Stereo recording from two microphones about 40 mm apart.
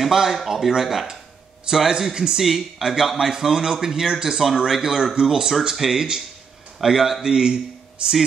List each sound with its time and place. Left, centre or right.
0.0 s a man's voice: centre